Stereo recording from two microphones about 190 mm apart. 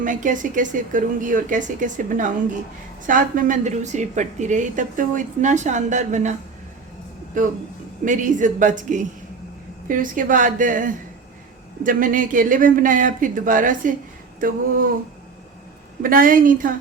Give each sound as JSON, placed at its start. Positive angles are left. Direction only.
{"t": 0.0, "sound": "a woman's voice", "side_deg": -45}
{"t": 7.3, "sound": "a woman's voice", "side_deg": -45}
{"t": 16.0, "sound": "speech", "side_deg": -45}